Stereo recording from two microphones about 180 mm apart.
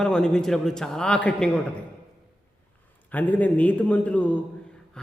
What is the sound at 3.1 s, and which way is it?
A man's voice, 10° left (ahead or behind).